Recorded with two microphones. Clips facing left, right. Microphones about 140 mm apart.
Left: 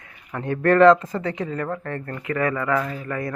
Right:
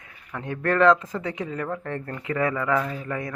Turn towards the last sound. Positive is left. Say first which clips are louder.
# left 2 dB
turn(degrees=-15)  # may be behind; listen again after turning